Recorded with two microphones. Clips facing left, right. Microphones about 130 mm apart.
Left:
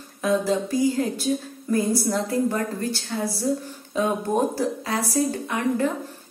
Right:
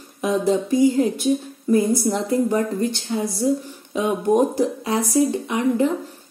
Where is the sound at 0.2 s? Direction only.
25° right (ahead or behind).